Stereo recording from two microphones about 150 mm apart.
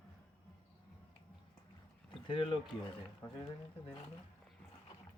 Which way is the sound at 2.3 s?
35° left (ahead or behind).